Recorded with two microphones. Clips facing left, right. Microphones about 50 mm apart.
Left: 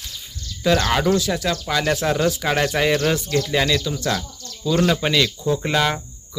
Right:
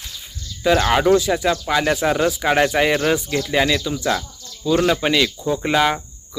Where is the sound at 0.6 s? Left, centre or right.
Centre.